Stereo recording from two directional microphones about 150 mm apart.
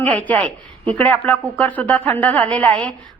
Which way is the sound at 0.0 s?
10° left (ahead or behind).